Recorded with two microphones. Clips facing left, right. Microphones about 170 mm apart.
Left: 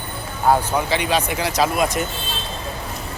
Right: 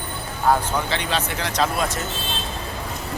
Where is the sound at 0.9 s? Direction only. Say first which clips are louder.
Left 4 dB; 10° left (ahead or behind).